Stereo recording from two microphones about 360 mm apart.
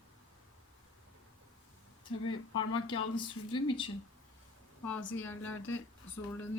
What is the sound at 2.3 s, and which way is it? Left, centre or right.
Speech, left.